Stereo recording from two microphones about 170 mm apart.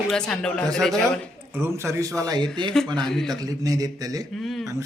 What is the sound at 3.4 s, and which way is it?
Speech, 20° right (ahead or behind).